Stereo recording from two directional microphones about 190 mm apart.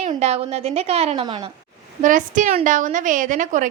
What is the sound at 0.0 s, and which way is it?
A woman's voice, 35° right (ahead or behind).